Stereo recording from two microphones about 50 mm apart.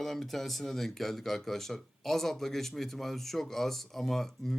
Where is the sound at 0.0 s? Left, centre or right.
Centre.